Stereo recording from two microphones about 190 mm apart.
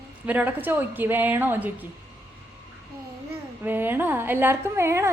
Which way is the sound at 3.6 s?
10° right (ahead or behind).